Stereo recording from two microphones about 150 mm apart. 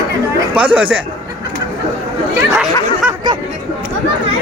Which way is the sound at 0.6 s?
10° right (ahead or behind).